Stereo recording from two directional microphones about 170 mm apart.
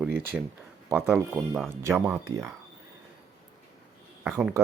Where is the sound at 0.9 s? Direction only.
10° right (ahead or behind).